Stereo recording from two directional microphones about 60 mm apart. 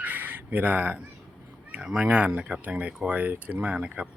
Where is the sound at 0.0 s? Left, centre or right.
Right.